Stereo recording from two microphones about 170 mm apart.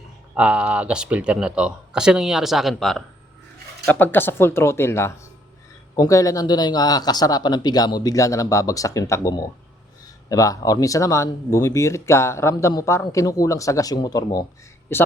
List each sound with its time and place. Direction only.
0.3 s speech: 5° right (ahead or behind)
3.8 s speech: 10° left (ahead or behind)